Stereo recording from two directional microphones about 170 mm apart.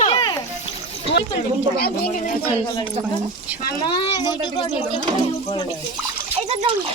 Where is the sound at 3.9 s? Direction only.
30° left (ahead or behind).